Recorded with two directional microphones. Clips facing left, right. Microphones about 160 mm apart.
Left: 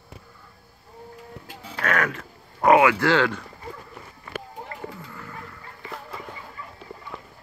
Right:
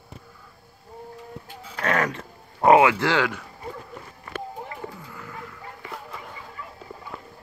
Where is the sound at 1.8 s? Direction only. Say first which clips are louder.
Right 1 dB; 30° right (ahead or behind); by 3.4 s 10° right (ahead or behind).